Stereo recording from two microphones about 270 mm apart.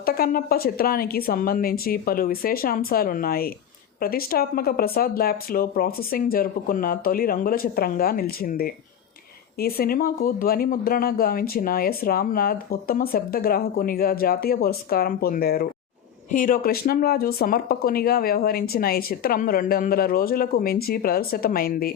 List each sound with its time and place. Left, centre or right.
0.0 s speech: left